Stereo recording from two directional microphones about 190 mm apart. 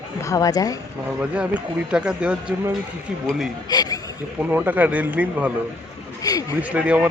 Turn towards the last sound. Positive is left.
turn(degrees=-5)  # may be behind; listen again after turning